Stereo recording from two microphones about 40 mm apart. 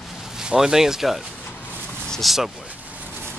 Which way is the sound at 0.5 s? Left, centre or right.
Centre.